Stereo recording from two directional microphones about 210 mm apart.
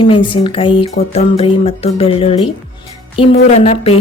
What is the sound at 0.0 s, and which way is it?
A woman's voice, 25° left (ahead or behind).